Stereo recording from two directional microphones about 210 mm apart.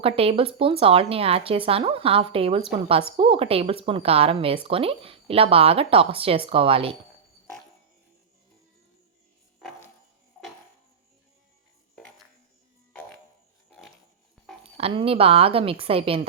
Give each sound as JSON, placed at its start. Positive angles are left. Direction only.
{"t": 0.0, "sound": "speech", "side_deg": -25}
{"t": 12.9, "sound": "music", "side_deg": 5}
{"t": 14.6, "sound": "speech", "side_deg": -30}